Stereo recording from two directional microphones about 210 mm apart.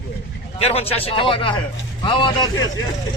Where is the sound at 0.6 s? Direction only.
30° left (ahead or behind).